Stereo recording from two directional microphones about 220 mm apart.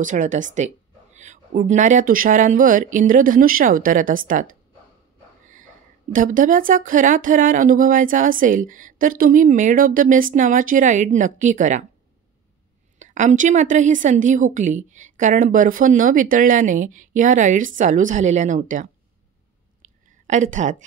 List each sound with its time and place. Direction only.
0.0 s a woman's voice: 35° right (ahead or behind)
6.1 s a woman's voice: 35° right (ahead or behind)
13.0 s a woman's voice: 35° right (ahead or behind)
19.8 s a sound: 35° right (ahead or behind)